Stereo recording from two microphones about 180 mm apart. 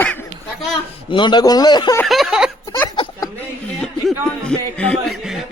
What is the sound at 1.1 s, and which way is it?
Speech, 25° left (ahead or behind).